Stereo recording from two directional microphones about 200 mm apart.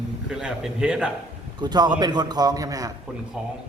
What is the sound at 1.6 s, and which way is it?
A man's voice, 20° right (ahead or behind).